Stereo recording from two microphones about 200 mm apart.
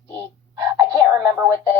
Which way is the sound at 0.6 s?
15° right (ahead or behind).